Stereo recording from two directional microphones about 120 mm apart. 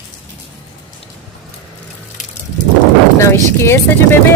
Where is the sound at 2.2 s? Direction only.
90° left.